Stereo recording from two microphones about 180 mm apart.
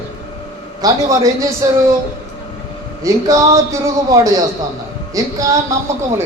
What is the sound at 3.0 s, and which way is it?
A man's voice, 15° right (ahead or behind).